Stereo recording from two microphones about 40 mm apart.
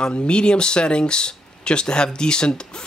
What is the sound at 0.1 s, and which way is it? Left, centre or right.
Speech, left.